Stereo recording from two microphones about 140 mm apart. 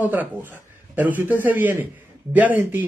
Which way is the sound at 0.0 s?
10° right (ahead or behind).